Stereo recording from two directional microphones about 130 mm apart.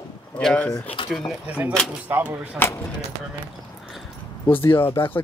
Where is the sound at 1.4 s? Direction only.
10° right (ahead or behind).